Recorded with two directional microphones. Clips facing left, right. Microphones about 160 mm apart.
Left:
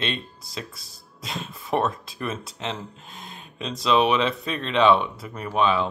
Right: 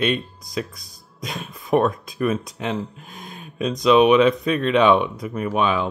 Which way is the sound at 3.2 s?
15° right (ahead or behind).